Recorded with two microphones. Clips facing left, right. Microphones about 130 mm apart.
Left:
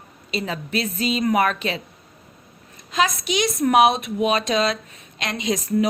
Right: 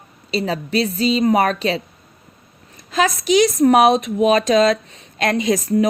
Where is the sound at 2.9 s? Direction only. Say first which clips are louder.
Right 5 dB; 40° right (ahead or behind).